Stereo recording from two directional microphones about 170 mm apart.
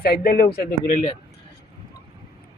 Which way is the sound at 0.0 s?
65° left (ahead or behind).